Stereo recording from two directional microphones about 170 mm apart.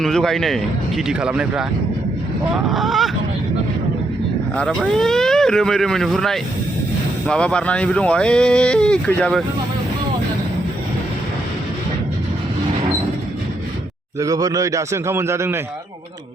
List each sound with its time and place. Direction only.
0.0 s speech: centre (ahead or behind)
2.6 s speech: centre (ahead or behind)
4.5 s speech: centre (ahead or behind)
14.2 s a man's voice: 20° right (ahead or behind)